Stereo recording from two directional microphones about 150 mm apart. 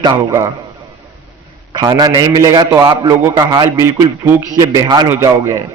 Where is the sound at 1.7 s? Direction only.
25° right (ahead or behind).